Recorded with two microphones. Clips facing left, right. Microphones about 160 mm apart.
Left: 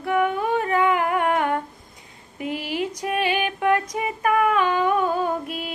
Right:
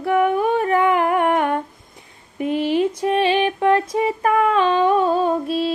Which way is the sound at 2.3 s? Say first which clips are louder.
Right 8 dB; 25° right (ahead or behind).